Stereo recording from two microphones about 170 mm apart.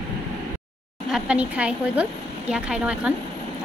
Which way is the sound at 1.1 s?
5° right (ahead or behind).